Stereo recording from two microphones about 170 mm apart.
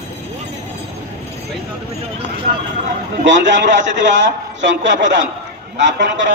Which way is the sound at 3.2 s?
90° right.